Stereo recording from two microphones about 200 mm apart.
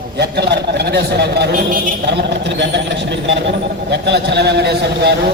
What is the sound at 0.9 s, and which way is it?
A man's voice, 55° right (ahead or behind).